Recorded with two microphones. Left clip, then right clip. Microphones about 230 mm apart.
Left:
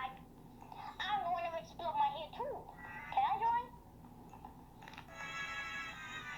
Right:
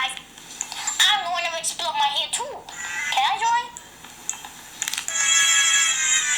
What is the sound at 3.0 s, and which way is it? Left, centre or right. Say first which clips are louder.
Music: right 12 dB; centre.